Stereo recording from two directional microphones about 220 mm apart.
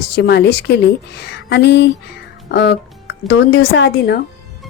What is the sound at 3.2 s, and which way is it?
Speech, 70° left (ahead or behind).